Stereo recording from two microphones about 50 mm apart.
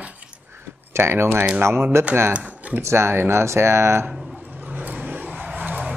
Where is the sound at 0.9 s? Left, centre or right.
Right.